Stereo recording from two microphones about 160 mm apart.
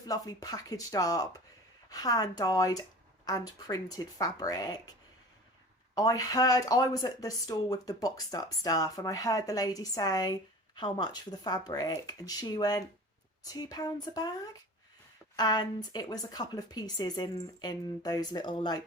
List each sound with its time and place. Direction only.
0.0 s speech: 25° left (ahead or behind)
5.9 s speech: 25° left (ahead or behind)